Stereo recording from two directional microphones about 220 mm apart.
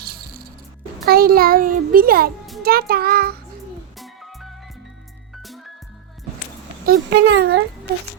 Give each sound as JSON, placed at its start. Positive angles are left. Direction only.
{"t": 0.0, "sound": "music", "side_deg": -45}
{"t": 1.0, "sound": "a child's voice", "side_deg": -45}
{"t": 4.0, "sound": "music", "side_deg": 0}
{"t": 6.8, "sound": "a child's voice", "side_deg": -50}